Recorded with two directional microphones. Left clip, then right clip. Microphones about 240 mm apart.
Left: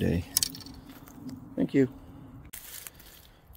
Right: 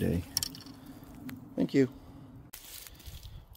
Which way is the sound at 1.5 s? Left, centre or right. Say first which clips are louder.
Left 2 dB; centre.